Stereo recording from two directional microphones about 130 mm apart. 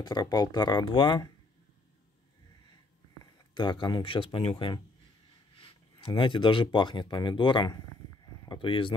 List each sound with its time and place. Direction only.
0.0 s speech: 30° left (ahead or behind)
3.5 s speech: 35° left (ahead or behind)